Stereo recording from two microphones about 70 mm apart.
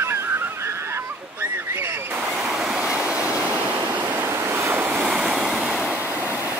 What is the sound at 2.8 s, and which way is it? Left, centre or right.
Waves, right.